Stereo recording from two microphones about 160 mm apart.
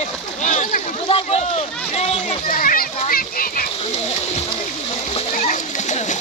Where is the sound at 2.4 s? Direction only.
60° left (ahead or behind).